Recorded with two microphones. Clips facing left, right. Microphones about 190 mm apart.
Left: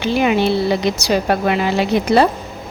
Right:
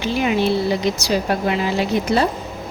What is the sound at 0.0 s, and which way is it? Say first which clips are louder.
Speech: left 3 dB; 70° left (ahead or behind).